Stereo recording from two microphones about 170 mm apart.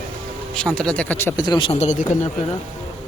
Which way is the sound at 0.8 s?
5° left (ahead or behind).